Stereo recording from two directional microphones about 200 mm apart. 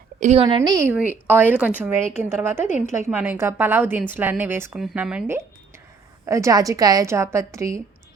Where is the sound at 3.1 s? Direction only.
10° right (ahead or behind).